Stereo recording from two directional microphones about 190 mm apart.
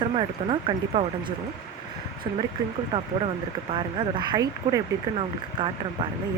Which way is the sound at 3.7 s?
25° right (ahead or behind).